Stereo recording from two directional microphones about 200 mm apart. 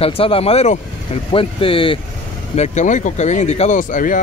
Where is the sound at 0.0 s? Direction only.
30° left (ahead or behind).